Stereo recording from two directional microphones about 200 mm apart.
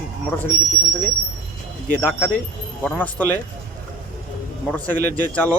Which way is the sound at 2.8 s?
10° left (ahead or behind).